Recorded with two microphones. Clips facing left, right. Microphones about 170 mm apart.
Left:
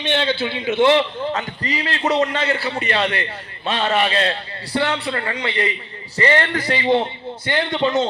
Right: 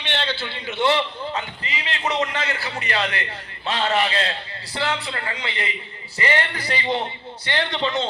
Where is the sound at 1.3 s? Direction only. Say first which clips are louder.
Left 5 dB; 40° left (ahead or behind).